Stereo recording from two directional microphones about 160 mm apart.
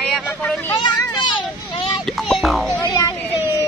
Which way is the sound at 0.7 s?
25° left (ahead or behind).